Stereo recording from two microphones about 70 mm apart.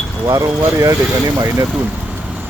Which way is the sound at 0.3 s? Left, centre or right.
Right.